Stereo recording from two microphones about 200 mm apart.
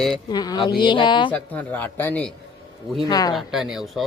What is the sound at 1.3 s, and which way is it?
Speech, 10° left (ahead or behind).